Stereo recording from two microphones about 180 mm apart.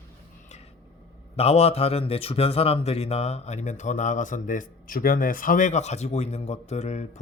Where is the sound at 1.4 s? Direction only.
35° left (ahead or behind).